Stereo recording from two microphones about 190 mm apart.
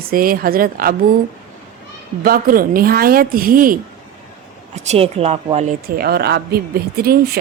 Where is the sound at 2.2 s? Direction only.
50° right (ahead or behind).